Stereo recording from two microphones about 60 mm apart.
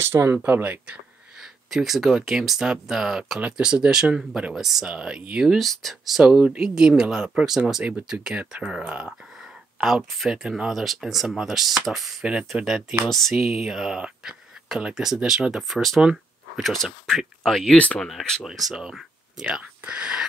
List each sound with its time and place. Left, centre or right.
0.1 s speech: right
1.7 s speech: centre
3.3 s speech: centre
5.6 s speech: centre
13.5 s speech: centre
15.7 s speech: centre
17.7 s speech: left
18.0 s speech: centre
18.4 s speech: centre
19.5 s speech: centre